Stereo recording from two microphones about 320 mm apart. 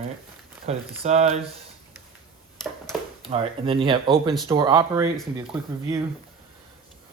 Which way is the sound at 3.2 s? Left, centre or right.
Centre.